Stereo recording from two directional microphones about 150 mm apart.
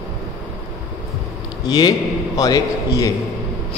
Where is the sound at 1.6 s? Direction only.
25° left (ahead or behind).